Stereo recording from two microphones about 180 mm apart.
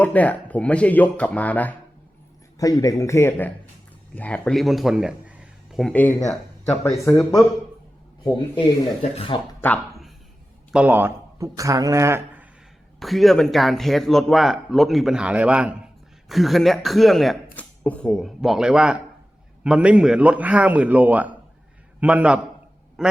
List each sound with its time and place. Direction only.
0.0 s speech: 10° left (ahead or behind)
2.6 s a man's voice: 20° left (ahead or behind); by 5.9 s 5° right (ahead or behind)
5.9 s speech: 10° left (ahead or behind)
8.2 s a man's voice: 25° left (ahead or behind)
9.6 s a sound: 10° left (ahead or behind)
10.7 s speech: 5° right (ahead or behind)
13.0 s a man's voice: centre (ahead or behind)